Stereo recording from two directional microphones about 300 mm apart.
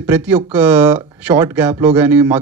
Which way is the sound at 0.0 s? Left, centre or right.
Centre.